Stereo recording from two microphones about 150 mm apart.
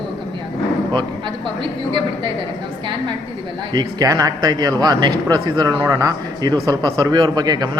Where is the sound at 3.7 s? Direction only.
25° right (ahead or behind).